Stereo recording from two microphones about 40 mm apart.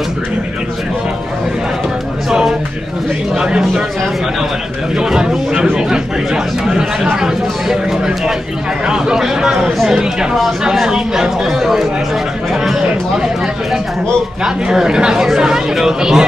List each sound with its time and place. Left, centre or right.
3.3 s speech: centre
4.9 s speech: centre
8.8 s speech: centre
14.4 s speech: centre